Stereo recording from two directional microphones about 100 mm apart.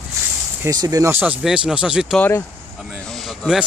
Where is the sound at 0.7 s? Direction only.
40° right (ahead or behind).